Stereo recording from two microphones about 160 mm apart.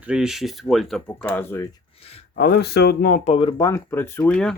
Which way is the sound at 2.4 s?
80° left.